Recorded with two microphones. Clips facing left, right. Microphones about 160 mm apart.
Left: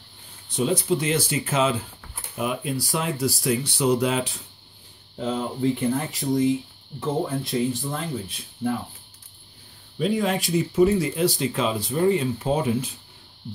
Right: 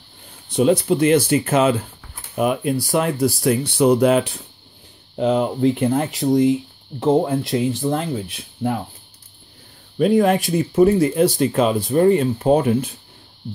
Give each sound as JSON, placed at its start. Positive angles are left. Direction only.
{"t": 0.5, "sound": "speech", "side_deg": -60}
{"t": 5.1, "sound": "speech", "side_deg": -70}
{"t": 9.9, "sound": "speech", "side_deg": -55}